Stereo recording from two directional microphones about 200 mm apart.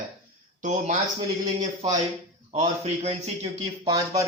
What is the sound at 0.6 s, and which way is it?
Speech, 40° right (ahead or behind).